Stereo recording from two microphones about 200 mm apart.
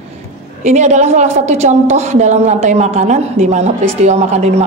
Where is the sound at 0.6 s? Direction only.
35° right (ahead or behind).